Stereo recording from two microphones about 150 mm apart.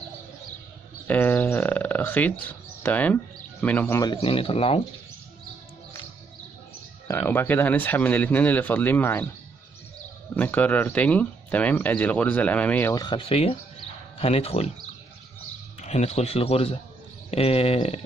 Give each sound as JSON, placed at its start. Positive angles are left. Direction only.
{"t": 1.0, "sound": "a sound", "side_deg": 10}
{"t": 2.8, "sound": "speech", "side_deg": 10}
{"t": 4.0, "sound": "speech", "side_deg": 35}
{"t": 7.1, "sound": "speech", "side_deg": 15}
{"t": 10.3, "sound": "speech", "side_deg": 10}
{"t": 12.9, "sound": "speech", "side_deg": 30}
{"t": 15.8, "sound": "speech", "side_deg": 45}